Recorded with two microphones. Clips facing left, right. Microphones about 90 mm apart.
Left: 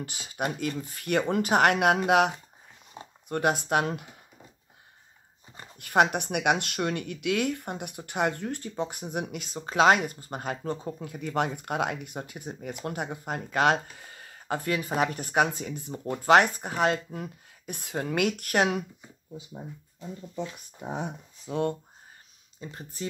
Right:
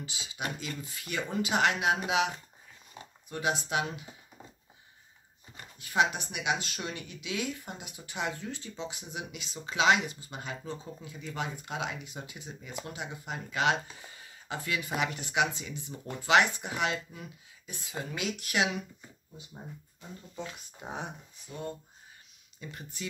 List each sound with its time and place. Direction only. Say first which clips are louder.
0.0 s speech: left 6 dB; 50° left (ahead or behind)
5.8 s speech: left 5 dB; 55° left (ahead or behind)
21.5 s speech: left 11 dB; 90° left
22.6 s speech: left 4 dB; 35° left (ahead or behind)